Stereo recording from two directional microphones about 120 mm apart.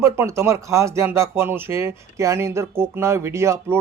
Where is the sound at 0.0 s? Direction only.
25° right (ahead or behind).